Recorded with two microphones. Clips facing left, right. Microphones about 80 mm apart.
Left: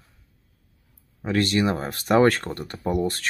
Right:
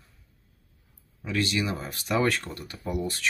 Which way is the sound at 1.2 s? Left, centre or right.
Left.